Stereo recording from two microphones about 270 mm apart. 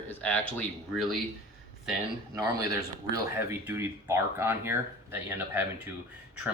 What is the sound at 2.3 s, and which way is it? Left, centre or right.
Speech, centre.